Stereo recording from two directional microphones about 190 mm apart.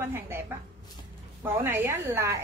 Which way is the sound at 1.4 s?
10° right (ahead or behind).